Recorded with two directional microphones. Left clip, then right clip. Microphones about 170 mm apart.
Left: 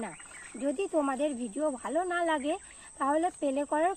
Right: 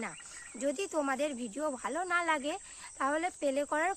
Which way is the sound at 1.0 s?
15° right (ahead or behind).